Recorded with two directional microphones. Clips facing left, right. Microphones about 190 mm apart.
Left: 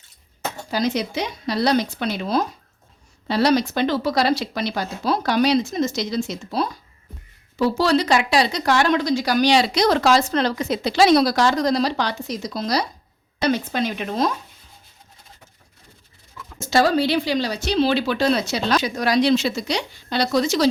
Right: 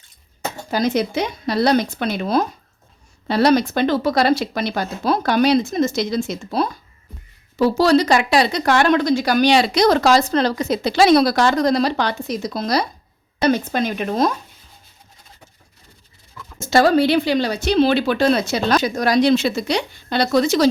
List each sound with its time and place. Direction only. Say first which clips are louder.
0.7 s speech: right 4 dB; 50° right (ahead or behind)
7.6 s speech: right 4 dB; 40° right (ahead or behind)
16.6 s speech: right 4 dB; 55° right (ahead or behind)